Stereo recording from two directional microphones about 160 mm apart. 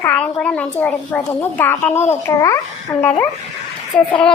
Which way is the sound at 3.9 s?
5° left (ahead or behind).